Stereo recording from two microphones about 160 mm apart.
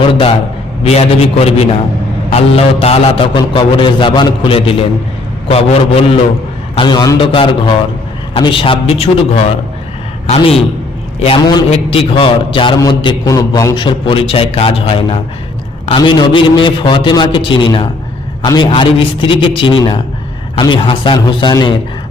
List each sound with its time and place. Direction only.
0.1 s a man's voice: 35° left (ahead or behind)
6.7 s a man's voice: 25° left (ahead or behind)
11.7 s a man's voice: 35° left (ahead or behind)